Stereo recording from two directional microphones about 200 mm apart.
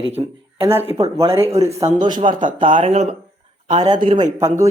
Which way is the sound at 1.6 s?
15° right (ahead or behind).